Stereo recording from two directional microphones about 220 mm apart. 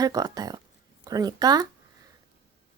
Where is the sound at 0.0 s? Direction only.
15° right (ahead or behind).